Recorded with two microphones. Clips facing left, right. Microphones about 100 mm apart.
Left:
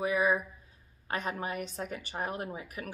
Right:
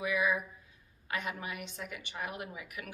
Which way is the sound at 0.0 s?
40° left (ahead or behind).